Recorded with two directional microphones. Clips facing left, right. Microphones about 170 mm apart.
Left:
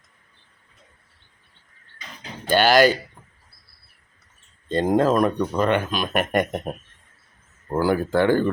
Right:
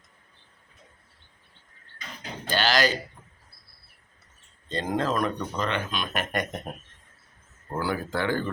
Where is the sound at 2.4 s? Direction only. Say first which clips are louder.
Left 8 dB; 50° left (ahead or behind).